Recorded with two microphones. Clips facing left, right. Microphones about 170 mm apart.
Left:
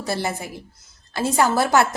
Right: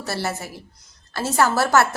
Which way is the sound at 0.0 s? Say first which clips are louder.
Left 1 dB; 15° left (ahead or behind).